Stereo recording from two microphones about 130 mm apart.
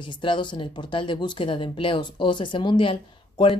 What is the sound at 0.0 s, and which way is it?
Speech, 40° left (ahead or behind).